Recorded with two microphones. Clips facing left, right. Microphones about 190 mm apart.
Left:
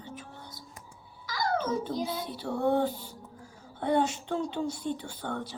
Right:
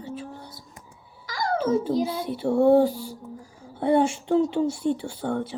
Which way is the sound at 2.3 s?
25° right (ahead or behind).